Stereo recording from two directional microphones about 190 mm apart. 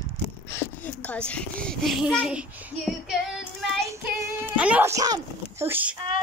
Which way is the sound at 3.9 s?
10° right (ahead or behind).